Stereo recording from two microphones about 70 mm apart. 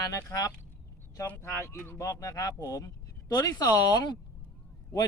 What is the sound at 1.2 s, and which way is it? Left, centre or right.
Speech, left.